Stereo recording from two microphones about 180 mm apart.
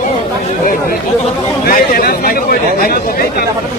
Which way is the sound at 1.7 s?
55° left (ahead or behind).